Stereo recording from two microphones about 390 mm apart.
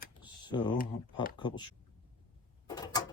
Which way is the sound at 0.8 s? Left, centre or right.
Left.